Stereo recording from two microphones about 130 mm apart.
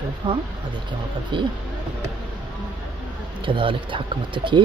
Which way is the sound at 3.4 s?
40° right (ahead or behind).